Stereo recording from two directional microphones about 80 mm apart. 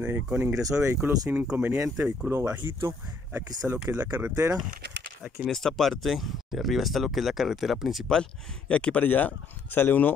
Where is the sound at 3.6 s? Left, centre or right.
Centre.